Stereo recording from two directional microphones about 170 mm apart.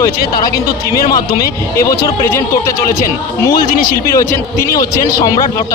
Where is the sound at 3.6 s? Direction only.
60° left (ahead or behind).